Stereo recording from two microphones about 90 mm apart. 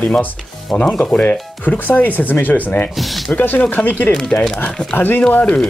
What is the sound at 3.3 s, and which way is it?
Speech, 20° left (ahead or behind).